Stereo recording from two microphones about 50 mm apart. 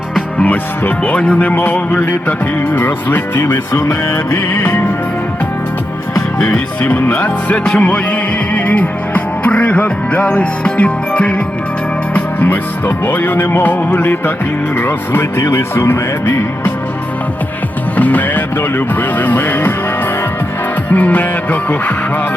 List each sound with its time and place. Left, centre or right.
0.4 s music: left
3.4 s music: left
7.1 s music: left
12.1 s music: left
15.4 s music: left
17.9 s music: left
20.9 s music: left